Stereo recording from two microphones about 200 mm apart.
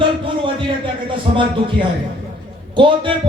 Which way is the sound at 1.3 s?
35° right (ahead or behind).